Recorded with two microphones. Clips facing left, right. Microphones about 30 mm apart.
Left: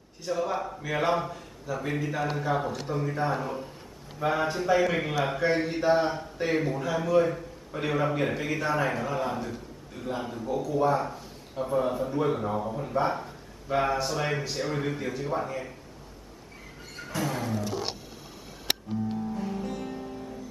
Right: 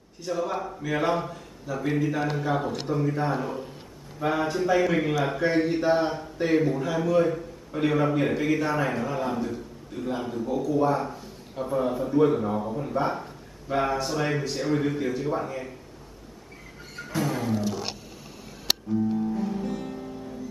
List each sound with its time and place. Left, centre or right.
0.2 s speech: centre
17.1 s music: centre
19.1 s music: centre